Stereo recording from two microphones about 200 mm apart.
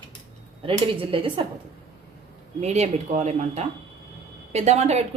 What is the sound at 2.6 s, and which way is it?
Speech, 35° right (ahead or behind).